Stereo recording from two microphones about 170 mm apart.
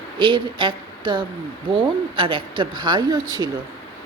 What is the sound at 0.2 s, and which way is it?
A woman's voice, 30° right (ahead or behind).